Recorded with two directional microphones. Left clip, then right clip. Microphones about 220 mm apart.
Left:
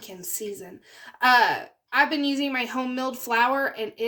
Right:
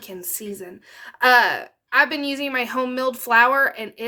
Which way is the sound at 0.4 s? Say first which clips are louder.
Right 1 dB; 50° right (ahead or behind).